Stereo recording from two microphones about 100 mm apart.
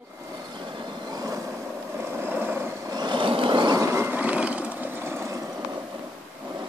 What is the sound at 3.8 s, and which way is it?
Vehicle, 25° right (ahead or behind).